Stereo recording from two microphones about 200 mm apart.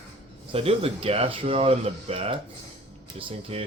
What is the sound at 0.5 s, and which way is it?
Speech, 30° right (ahead or behind).